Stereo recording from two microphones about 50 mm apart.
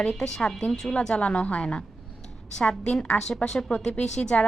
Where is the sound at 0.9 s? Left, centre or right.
Left.